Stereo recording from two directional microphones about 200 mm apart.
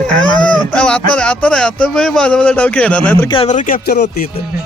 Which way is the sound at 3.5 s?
40° left (ahead or behind).